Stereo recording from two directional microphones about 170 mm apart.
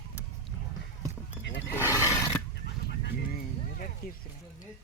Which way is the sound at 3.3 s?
55° left (ahead or behind).